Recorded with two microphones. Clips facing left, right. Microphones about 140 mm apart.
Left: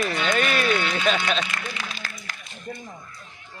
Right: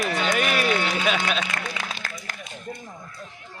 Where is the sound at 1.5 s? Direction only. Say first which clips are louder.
Right 2 dB; 50° right (ahead or behind).